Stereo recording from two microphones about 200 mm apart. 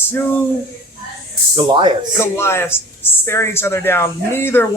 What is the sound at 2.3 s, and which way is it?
Speech, 10° left (ahead or behind).